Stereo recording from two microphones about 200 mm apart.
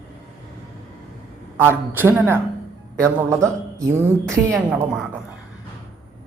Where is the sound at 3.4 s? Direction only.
15° right (ahead or behind).